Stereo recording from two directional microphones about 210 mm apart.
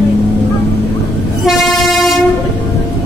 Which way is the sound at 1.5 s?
Centre (ahead or behind).